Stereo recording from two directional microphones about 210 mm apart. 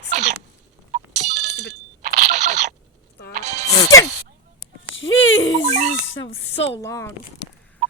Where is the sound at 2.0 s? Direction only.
35° right (ahead or behind).